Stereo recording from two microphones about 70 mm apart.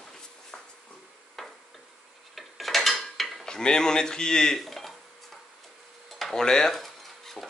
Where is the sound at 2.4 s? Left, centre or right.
Centre.